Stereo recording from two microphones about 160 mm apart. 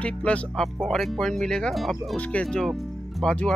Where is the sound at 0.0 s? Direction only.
5° left (ahead or behind).